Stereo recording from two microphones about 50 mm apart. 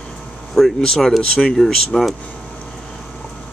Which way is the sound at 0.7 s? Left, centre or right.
Centre.